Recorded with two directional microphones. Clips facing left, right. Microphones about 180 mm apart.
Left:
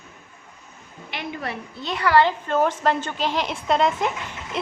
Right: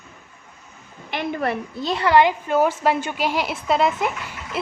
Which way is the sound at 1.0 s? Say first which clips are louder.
Right 7 dB; 50° right (ahead or behind).